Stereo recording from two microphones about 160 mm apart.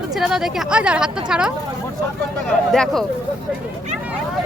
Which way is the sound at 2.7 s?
5° left (ahead or behind).